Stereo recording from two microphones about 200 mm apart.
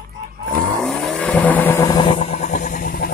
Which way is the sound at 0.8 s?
5° left (ahead or behind).